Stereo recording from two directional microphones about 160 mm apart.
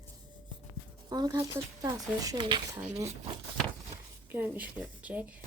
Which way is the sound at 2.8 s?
45° right (ahead or behind).